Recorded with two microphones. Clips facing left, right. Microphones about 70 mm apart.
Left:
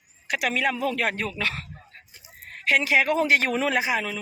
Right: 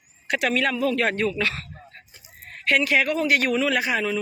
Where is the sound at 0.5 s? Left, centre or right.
Centre.